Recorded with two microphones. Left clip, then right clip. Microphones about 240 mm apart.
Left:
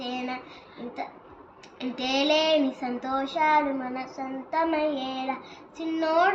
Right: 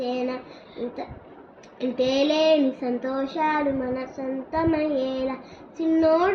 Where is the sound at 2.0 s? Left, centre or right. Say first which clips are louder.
Right 3 dB; centre.